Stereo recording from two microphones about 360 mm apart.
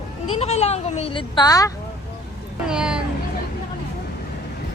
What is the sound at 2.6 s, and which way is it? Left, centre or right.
Speech, centre.